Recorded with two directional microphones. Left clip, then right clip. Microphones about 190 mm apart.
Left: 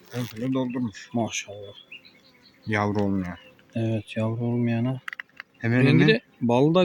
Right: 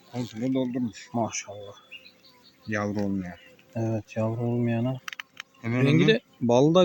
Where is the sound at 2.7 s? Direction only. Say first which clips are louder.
Left 4 dB; 60° left (ahead or behind).